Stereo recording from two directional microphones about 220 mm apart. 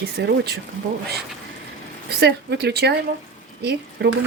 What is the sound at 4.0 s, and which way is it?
Speech, 50° right (ahead or behind).